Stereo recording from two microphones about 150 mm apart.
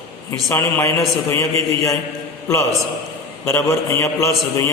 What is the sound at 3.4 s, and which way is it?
A man's voice, 20° left (ahead or behind).